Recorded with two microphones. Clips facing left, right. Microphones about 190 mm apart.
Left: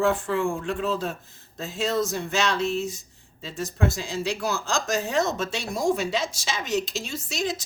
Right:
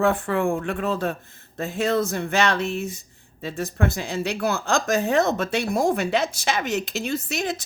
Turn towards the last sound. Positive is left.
turn(degrees=-60)  # may be behind; listen again after turning